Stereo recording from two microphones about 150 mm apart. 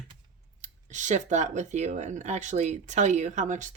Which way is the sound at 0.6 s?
55° right (ahead or behind).